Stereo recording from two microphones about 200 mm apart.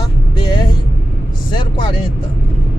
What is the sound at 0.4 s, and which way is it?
Vehicle, 20° left (ahead or behind).